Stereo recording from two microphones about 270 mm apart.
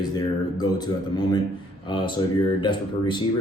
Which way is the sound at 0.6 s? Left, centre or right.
Centre.